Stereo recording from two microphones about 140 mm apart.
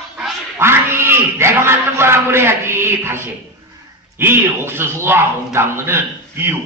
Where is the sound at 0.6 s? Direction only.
20° right (ahead or behind).